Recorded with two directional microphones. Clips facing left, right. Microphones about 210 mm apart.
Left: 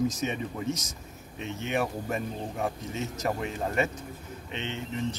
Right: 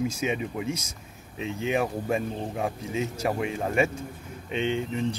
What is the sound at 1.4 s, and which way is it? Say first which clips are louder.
Speech: right 5 dB; 90° right.